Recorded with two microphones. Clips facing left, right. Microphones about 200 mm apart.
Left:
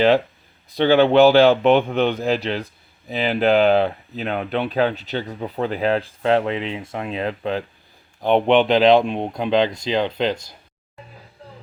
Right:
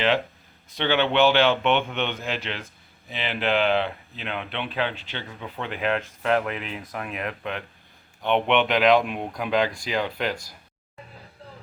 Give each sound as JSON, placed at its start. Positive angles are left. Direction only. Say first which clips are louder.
{"t": 0.8, "sound": "speech", "louder": "left 8 dB", "side_deg": 35}